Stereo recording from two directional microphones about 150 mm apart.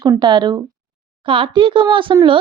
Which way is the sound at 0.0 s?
30° right (ahead or behind).